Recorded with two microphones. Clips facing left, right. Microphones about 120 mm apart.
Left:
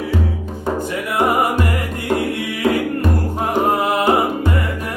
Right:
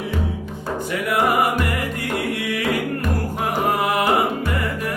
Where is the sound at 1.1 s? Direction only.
20° left (ahead or behind).